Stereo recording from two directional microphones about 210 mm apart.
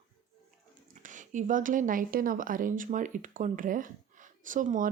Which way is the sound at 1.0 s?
35° right (ahead or behind).